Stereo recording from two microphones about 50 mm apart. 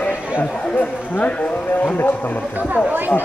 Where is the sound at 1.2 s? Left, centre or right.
Left.